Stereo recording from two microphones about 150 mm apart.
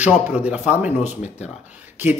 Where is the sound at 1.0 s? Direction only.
50° left (ahead or behind).